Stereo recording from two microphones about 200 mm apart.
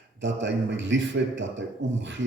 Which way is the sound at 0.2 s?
65° right (ahead or behind).